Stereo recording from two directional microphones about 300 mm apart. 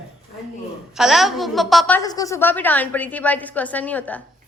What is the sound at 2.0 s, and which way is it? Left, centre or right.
A woman's voice, centre.